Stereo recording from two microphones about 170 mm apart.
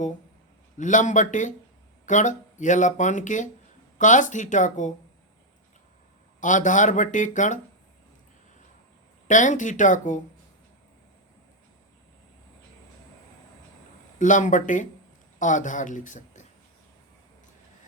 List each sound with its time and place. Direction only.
0.8 s speech: 50° left (ahead or behind)
6.4 s speech: 50° left (ahead or behind)
9.2 s speech: 45° left (ahead or behind)
14.2 s speech: 45° left (ahead or behind)